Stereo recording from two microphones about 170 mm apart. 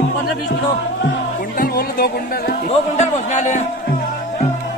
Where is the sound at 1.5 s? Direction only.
60° left (ahead or behind).